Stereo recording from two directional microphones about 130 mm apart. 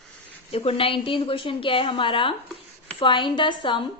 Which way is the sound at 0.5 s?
45° left (ahead or behind).